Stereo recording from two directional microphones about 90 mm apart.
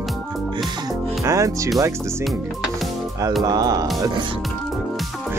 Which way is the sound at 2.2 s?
Centre (ahead or behind).